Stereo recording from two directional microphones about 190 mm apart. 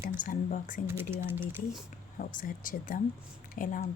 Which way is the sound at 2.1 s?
45° left (ahead or behind).